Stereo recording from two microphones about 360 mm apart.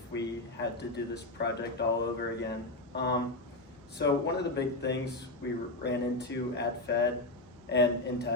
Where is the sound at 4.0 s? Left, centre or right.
Left.